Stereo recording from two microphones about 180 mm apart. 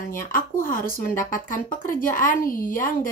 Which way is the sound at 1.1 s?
45° left (ahead or behind).